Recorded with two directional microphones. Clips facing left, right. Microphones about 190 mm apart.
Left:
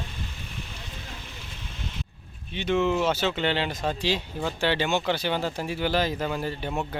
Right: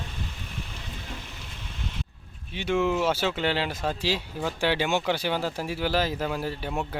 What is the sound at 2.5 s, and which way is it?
Speech, 10° right (ahead or behind).